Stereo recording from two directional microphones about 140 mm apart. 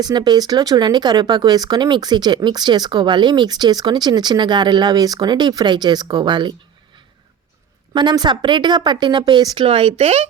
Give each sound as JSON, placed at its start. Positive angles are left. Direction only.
{"t": 0.0, "sound": "speech", "side_deg": -30}
{"t": 7.9, "sound": "speech", "side_deg": -30}